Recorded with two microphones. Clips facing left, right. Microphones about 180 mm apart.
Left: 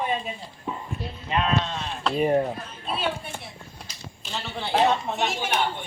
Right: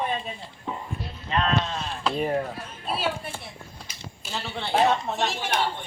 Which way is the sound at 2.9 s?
5° right (ahead or behind).